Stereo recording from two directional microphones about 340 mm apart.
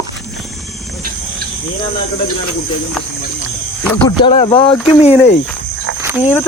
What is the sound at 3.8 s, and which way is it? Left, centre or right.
Speech, centre.